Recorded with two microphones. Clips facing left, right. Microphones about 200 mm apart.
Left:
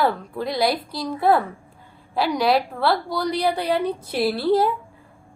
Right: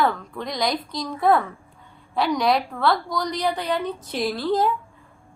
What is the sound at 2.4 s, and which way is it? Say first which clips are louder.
Speech: left 2 dB; 5° left (ahead or behind).